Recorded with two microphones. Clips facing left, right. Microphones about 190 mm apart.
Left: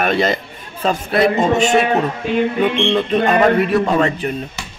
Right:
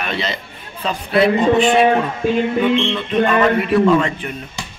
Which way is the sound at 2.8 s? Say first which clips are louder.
Left 2 dB; 45° left (ahead or behind).